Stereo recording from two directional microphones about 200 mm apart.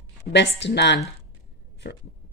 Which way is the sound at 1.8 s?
50° left (ahead or behind).